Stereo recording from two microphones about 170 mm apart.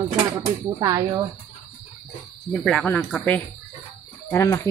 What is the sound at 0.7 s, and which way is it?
Speech, 20° right (ahead or behind).